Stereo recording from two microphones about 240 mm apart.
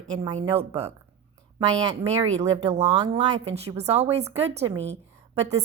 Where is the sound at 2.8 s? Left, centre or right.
Centre.